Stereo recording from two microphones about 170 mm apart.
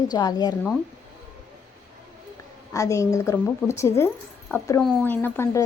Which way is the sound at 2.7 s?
20° left (ahead or behind).